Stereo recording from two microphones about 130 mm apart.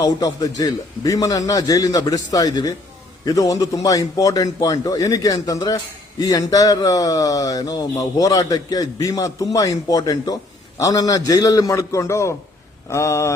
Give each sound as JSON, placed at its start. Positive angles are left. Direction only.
{"t": 0.0, "sound": "a man's voice", "side_deg": 30}